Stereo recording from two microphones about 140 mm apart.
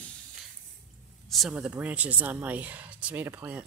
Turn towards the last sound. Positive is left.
turn(degrees=-10)  # may be behind; listen again after turning